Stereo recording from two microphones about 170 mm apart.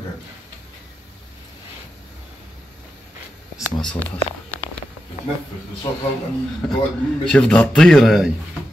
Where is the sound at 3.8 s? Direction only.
10° left (ahead or behind).